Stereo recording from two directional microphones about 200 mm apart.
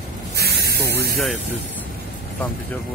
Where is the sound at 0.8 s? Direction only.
55° left (ahead or behind).